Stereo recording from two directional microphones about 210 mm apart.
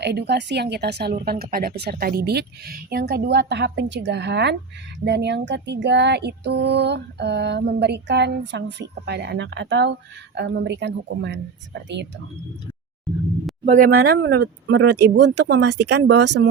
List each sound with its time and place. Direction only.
0.0 s a woman's voice: 50° right (ahead or behind)
13.7 s speech: 40° right (ahead or behind)
14.0 s speech: 50° right (ahead or behind)